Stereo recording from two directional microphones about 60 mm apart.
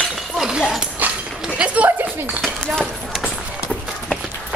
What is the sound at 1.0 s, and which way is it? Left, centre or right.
Dog, right.